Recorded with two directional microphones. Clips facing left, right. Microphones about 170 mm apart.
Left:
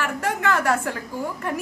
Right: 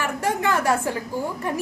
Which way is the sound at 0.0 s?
20° right (ahead or behind).